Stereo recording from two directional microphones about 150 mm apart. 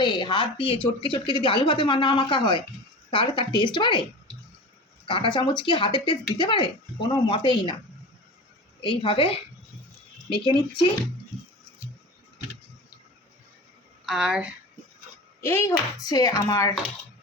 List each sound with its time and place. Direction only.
0.0 s speech: 30° left (ahead or behind)
5.0 s speech: 35° left (ahead or behind)
8.8 s speech: 35° left (ahead or behind)
14.0 s a woman's voice: 5° right (ahead or behind)
15.4 s speech: 15° left (ahead or behind)